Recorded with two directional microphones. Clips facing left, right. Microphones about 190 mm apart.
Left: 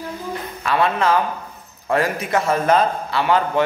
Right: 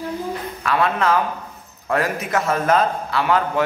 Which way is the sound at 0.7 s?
Centre (ahead or behind).